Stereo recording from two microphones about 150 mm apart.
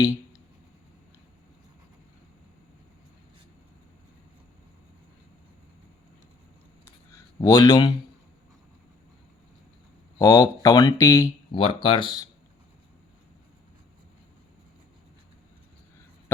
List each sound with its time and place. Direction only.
7.1 s speech: 25° left (ahead or behind)
10.2 s speech: 25° left (ahead or behind)
11.5 s speech: 35° left (ahead or behind)